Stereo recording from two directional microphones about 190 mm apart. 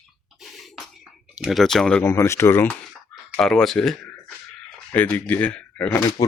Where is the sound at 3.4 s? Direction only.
Centre (ahead or behind).